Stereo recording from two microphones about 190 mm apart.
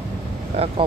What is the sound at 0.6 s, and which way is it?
Speech, 30° right (ahead or behind).